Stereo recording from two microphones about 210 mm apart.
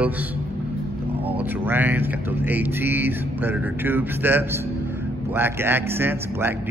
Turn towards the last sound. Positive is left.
turn(degrees=-10)  # may be behind; listen again after turning